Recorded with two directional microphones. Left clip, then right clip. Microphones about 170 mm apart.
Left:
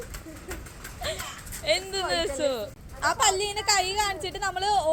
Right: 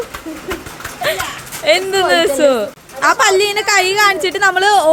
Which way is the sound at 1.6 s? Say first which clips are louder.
Right 14 dB; 20° right (ahead or behind).